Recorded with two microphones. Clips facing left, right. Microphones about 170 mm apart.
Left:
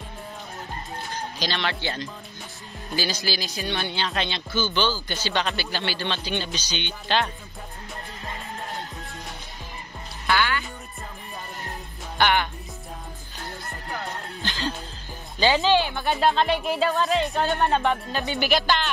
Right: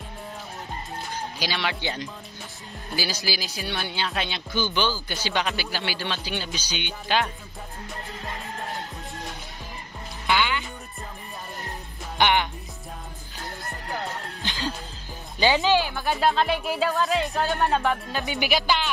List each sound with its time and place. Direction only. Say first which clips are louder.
1.4 s speech: left 1 dB; 10° right (ahead or behind)
10.2 s music: even; 15° right (ahead or behind)
12.2 s speech: even; 15° right (ahead or behind)
15.3 s speech: left 1 dB; 15° right (ahead or behind)
18.2 s speech: left 2 dB; 15° right (ahead or behind)